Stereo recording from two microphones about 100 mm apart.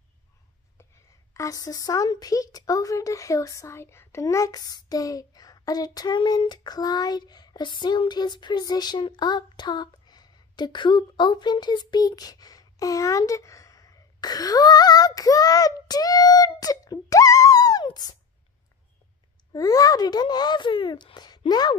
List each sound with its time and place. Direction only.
1.3 s a woman's voice: 35° left (ahead or behind)
19.5 s speech: 35° left (ahead or behind)